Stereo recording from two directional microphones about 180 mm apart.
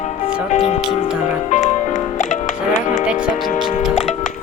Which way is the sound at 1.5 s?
40° left (ahead or behind).